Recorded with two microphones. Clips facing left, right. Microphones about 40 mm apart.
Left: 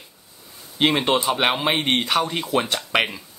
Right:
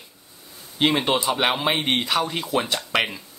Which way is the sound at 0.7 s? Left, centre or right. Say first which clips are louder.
Left 1 dB; centre.